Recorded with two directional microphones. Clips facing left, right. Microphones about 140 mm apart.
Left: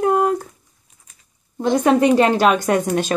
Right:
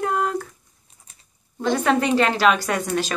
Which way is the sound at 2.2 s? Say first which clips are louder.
Left 4 dB; 45° left (ahead or behind).